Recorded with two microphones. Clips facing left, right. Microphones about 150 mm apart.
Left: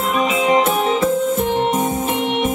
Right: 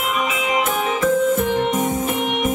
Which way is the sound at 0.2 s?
30° left (ahead or behind).